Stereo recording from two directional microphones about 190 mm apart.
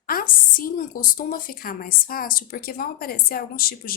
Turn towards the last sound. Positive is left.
turn(degrees=50)  # may be behind; listen again after turning